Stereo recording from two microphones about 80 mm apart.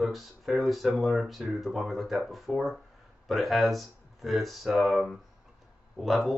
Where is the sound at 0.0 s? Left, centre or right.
Centre.